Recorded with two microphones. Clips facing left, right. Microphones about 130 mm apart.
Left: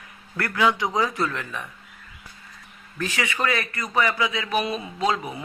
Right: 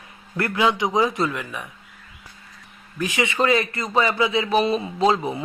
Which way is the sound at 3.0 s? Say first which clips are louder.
Right 4 dB; 15° right (ahead or behind).